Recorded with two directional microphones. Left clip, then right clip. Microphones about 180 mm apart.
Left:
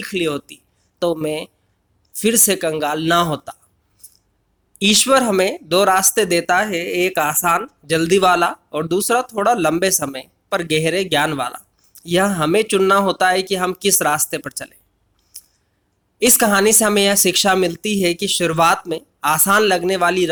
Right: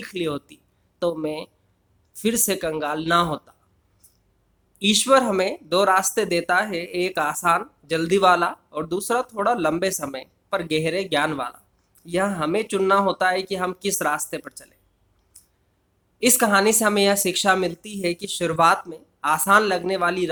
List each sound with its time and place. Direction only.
0.0 s speech: 20° left (ahead or behind)
15.3 s a sound: 25° left (ahead or behind)
16.1 s speech: 25° left (ahead or behind)